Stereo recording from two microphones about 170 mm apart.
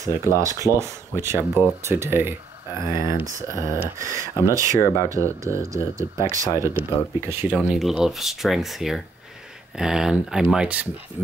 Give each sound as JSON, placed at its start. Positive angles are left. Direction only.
{"t": 0.0, "sound": "speech", "side_deg": -15}
{"t": 4.7, "sound": "speech", "side_deg": 20}
{"t": 5.1, "sound": "speech", "side_deg": -15}